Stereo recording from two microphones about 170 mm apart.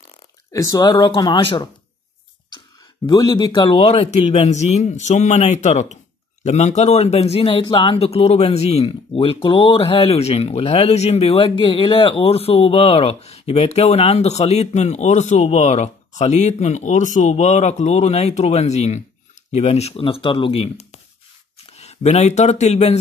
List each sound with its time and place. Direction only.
0.5 s speech: 20° left (ahead or behind)
3.1 s speech: 25° left (ahead or behind)